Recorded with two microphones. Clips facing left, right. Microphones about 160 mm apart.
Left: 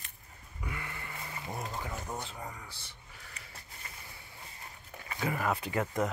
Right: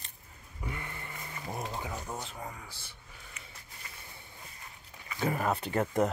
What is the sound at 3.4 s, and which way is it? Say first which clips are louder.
Sniff: right 1 dB; 35° left (ahead or behind).